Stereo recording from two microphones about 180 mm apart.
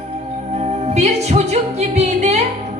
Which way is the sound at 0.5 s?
35° right (ahead or behind).